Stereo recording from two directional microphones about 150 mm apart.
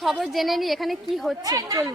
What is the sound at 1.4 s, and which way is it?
Speech, 25° right (ahead or behind).